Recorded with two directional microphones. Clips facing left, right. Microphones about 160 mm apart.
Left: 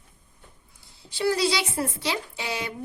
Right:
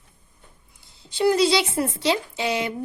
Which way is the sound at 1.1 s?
20° right (ahead or behind).